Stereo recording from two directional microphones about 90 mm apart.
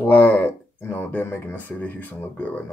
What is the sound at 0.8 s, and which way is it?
Speech, 25° left (ahead or behind).